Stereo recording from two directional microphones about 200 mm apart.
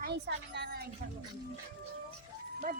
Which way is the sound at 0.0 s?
55° right (ahead or behind).